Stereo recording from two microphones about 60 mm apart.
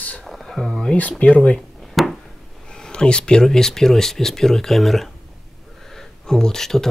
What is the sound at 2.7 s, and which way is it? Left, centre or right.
Speech, centre.